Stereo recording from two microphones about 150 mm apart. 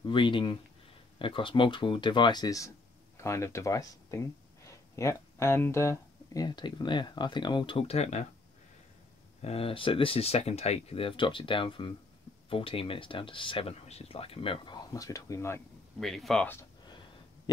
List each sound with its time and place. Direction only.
0.0 s speech: 35° left (ahead or behind)
9.4 s speech: 40° left (ahead or behind); by 15.6 s 20° left (ahead or behind)
16.0 s speech: centre (ahead or behind)